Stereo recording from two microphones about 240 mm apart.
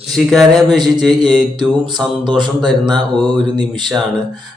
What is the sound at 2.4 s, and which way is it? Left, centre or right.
Speech, centre.